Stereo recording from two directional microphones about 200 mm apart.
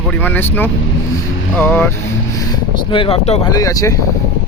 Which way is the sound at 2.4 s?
20° left (ahead or behind).